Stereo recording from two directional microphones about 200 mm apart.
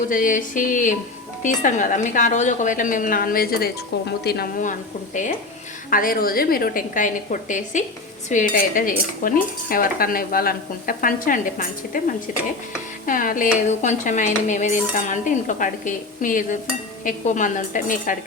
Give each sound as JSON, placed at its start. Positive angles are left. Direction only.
{"t": 0.1, "sound": "dishes", "side_deg": 40}
{"t": 4.2, "sound": "cutlery", "side_deg": 50}
{"t": 5.9, "sound": "cutlery", "side_deg": 45}
{"t": 13.1, "sound": "dishes", "side_deg": 40}